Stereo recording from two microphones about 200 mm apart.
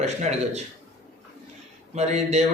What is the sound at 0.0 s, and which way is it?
Speech, 35° right (ahead or behind).